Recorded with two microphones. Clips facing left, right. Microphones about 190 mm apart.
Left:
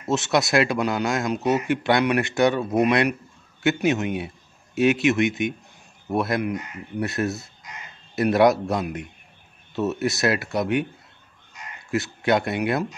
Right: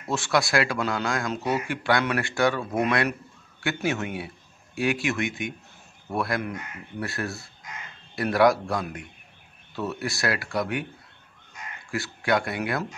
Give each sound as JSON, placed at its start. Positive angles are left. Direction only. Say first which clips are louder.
{"t": 0.0, "sound": "speech", "louder": "left 3 dB", "side_deg": 20}
{"t": 11.9, "sound": "speech", "louder": "left 4 dB", "side_deg": 20}